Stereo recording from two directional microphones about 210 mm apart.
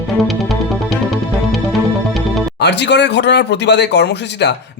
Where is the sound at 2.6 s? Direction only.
55° left (ahead or behind).